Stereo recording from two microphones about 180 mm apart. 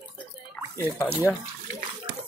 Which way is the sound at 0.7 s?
15° left (ahead or behind).